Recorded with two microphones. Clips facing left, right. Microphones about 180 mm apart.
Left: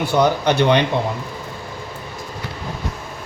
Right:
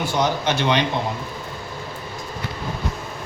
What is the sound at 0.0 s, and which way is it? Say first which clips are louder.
Speech: left 5 dB; 60° left (ahead or behind).